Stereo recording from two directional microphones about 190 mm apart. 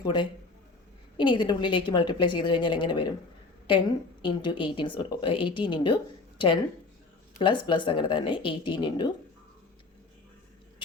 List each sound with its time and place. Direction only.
0.0 s a woman's voice: 25° left (ahead or behind)
7.3 s a woman's voice: 25° left (ahead or behind)